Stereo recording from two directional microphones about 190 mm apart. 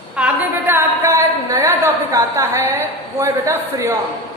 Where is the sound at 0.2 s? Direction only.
10° right (ahead or behind).